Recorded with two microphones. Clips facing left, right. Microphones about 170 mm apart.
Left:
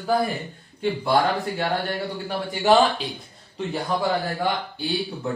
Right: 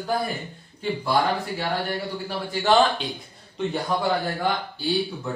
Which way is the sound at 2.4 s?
20° left (ahead or behind).